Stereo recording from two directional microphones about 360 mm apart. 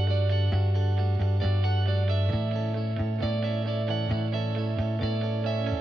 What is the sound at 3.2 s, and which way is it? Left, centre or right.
Music, centre.